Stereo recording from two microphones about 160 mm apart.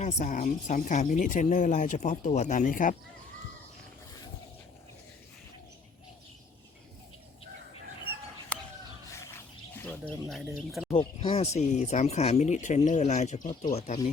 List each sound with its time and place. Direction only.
0.0 s speech: 45° left (ahead or behind)
10.2 s speech: centre (ahead or behind)
10.9 s speech: 35° left (ahead or behind)